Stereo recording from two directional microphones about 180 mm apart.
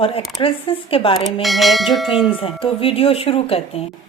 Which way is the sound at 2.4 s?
30° left (ahead or behind).